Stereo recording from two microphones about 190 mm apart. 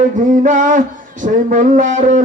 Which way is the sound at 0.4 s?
40° right (ahead or behind).